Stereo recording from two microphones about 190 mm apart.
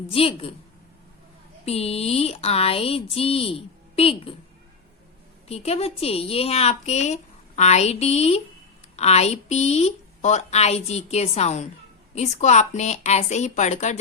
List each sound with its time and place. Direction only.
0.1 s a woman's voice: 30° left (ahead or behind)
1.6 s a woman's voice: 30° left (ahead or behind)
5.5 s a woman's voice: 35° left (ahead or behind)